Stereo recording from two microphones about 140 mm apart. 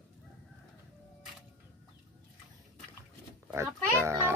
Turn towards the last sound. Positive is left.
turn(degrees=-20)  # may be behind; listen again after turning